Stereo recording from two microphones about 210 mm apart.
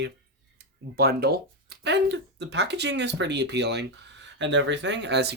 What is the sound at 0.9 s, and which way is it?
Speech, 50° right (ahead or behind).